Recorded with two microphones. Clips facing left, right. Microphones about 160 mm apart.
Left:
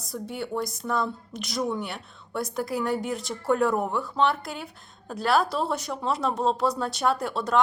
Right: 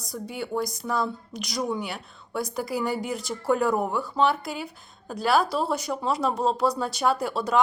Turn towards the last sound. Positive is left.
turn(degrees=0)  # may be behind; listen again after turning